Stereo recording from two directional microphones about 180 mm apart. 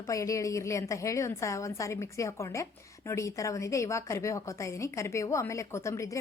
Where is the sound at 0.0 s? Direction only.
20° left (ahead or behind).